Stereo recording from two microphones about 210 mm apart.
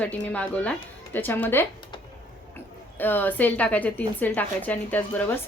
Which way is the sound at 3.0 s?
10° left (ahead or behind).